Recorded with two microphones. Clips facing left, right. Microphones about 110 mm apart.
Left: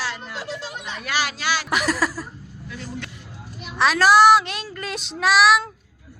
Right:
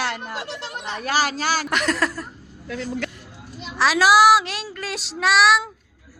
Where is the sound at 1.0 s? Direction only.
40° right (ahead or behind).